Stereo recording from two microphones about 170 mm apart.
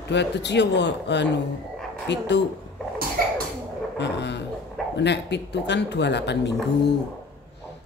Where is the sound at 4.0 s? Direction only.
90° left.